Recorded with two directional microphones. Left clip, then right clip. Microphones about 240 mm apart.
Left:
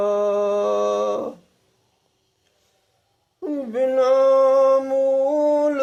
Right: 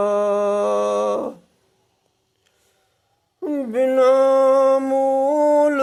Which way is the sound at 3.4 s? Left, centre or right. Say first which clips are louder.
Right 2 dB; right.